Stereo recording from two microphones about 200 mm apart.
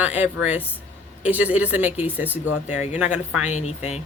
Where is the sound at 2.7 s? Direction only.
35° left (ahead or behind).